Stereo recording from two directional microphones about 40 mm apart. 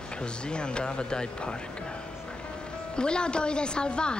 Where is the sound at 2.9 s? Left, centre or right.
Left.